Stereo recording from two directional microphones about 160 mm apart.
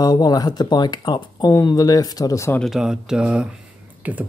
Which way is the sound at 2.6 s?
5° right (ahead or behind).